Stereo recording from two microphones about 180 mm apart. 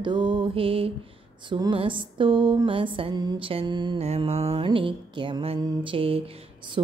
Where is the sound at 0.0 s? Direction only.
25° right (ahead or behind).